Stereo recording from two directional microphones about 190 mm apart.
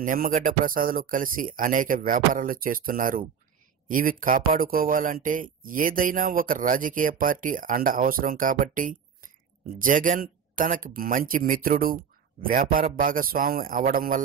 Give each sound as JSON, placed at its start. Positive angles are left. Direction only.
{"t": 0.0, "sound": "speech", "side_deg": -45}